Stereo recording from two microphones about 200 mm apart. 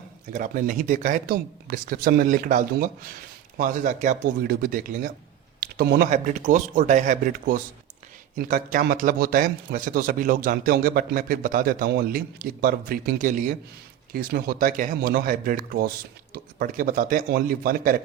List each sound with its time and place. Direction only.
0.3 s a man's voice: 40° right (ahead or behind)